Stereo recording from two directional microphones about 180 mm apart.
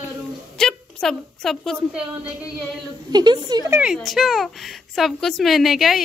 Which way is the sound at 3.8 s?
Centre (ahead or behind).